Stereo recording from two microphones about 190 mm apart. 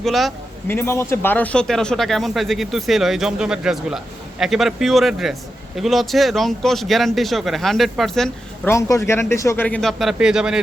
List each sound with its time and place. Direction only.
0.0 s speech: centre (ahead or behind)
0.7 s speech: 15° left (ahead or behind)
8.7 s a man's voice: 15° left (ahead or behind); by 10.6 s 5° right (ahead or behind)